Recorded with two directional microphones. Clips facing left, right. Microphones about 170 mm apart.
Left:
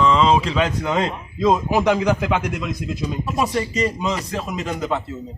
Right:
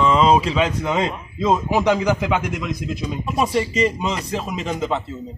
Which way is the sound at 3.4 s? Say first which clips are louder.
Right 3 dB; 20° right (ahead or behind).